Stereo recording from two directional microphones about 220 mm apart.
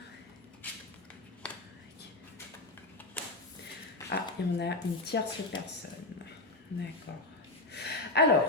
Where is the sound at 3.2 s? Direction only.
5° left (ahead or behind).